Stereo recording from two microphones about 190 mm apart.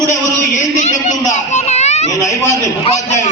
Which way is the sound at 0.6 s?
40° left (ahead or behind).